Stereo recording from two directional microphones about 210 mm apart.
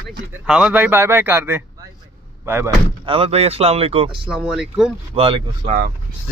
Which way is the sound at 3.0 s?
25° right (ahead or behind).